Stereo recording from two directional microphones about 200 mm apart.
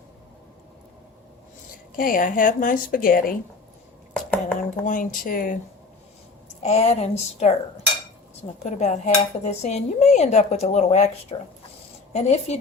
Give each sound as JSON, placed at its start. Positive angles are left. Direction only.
{"t": 2.0, "sound": "a woman's voice", "side_deg": 45}
{"t": 4.1, "sound": "a sound", "side_deg": 5}
{"t": 4.9, "sound": "a woman's voice", "side_deg": 45}
{"t": 6.5, "sound": "cutlery", "side_deg": 35}
{"t": 8.5, "sound": "cutlery", "side_deg": 35}